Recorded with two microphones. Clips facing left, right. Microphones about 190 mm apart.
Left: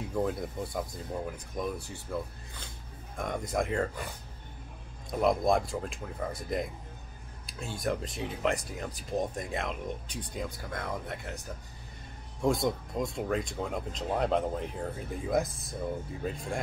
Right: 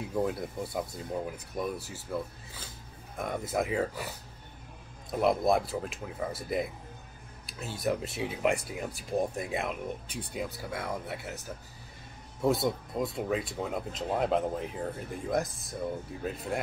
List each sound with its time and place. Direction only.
0.1 s speech: 5° right (ahead or behind)
3.2 s speech: 5° right (ahead or behind)
5.1 s speech: 5° right (ahead or behind)